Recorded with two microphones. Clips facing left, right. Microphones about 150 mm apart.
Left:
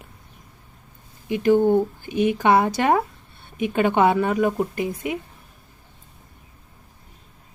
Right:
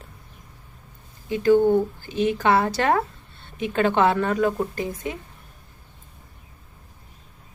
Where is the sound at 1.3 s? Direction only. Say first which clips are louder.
Even; 15° left (ahead or behind).